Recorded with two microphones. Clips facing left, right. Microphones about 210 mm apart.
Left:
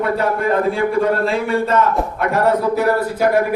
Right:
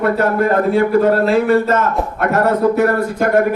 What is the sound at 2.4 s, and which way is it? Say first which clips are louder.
Speech: right 2 dB; 55° right (ahead or behind).